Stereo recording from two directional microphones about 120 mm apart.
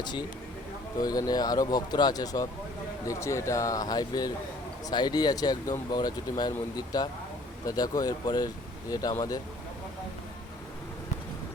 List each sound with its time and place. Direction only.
0.0 s a man's voice: 40° left (ahead or behind)